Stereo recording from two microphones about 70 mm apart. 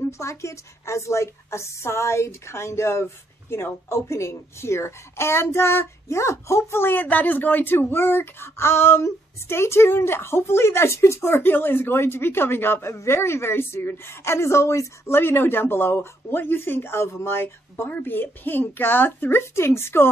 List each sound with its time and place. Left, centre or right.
0.0 s a woman's voice: left